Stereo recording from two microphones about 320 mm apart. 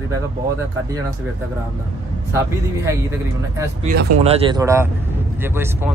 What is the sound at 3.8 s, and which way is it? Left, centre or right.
Speech, centre.